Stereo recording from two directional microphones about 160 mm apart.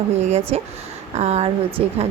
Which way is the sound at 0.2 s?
45° right (ahead or behind).